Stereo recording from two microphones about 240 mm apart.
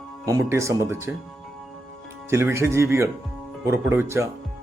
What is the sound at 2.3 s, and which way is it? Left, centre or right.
Speech, centre.